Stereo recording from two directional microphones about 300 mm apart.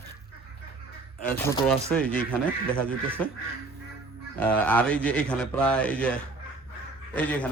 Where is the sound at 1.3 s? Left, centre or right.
Centre.